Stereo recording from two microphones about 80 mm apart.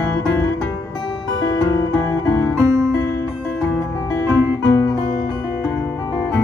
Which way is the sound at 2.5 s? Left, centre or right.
Right.